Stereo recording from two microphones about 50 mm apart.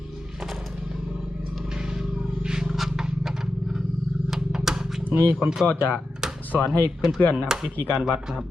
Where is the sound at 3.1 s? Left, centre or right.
Centre.